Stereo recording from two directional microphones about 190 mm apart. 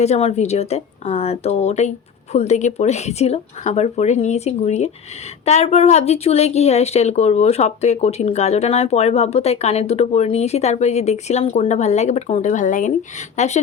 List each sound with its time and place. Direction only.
0.0 s speech: 35° left (ahead or behind)